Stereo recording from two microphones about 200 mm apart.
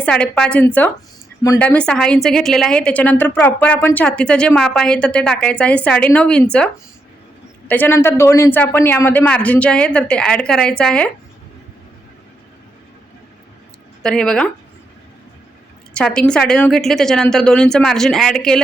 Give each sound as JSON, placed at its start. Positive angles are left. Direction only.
{"t": 0.0, "sound": "a woman's voice", "side_deg": 5}
{"t": 7.7, "sound": "a man's voice", "side_deg": 10}
{"t": 14.0, "sound": "a woman's voice", "side_deg": 5}
{"t": 16.0, "sound": "a woman's voice", "side_deg": 5}